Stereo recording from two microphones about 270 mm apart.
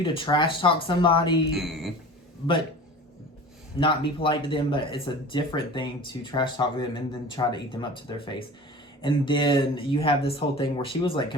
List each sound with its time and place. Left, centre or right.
0.0 s speech: centre
1.5 s a woman's voice: centre
3.8 s speech: centre